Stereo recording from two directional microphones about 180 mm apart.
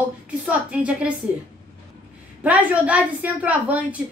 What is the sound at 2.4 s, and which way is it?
A woman's voice, 10° right (ahead or behind).